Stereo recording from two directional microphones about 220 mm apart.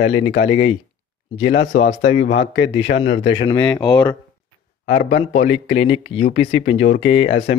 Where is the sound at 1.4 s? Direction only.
55° left (ahead or behind).